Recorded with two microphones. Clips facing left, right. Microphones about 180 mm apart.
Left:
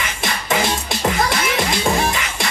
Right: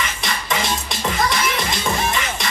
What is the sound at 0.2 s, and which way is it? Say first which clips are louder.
Music: left 7 dB; 50° left (ahead or behind).